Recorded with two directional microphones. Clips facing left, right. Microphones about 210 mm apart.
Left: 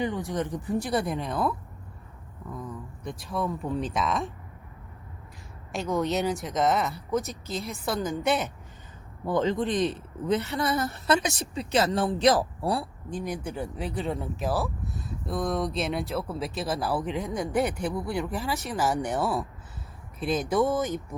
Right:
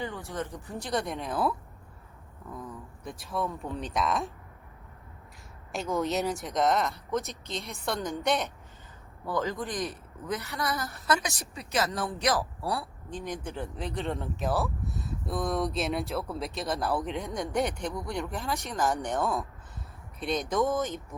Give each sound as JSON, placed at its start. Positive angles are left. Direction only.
{"t": 0.0, "sound": "speech", "side_deg": 15}
{"t": 5.7, "sound": "speech", "side_deg": 0}
{"t": 9.2, "sound": "a woman's voice", "side_deg": 25}
{"t": 13.1, "sound": "speech", "side_deg": 10}